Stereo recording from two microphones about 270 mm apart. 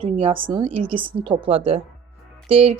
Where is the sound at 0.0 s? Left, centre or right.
Centre.